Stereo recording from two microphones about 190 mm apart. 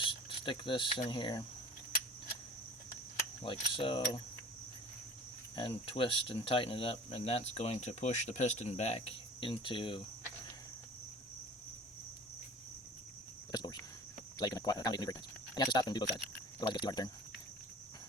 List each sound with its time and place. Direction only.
0.0 s cricket: 25° left (ahead or behind)
3.2 s mechanisms: 25° left (ahead or behind)
5.5 s speech: 25° left (ahead or behind)
13.5 s a sound: 20° left (ahead or behind)
14.3 s speech: 20° left (ahead or behind)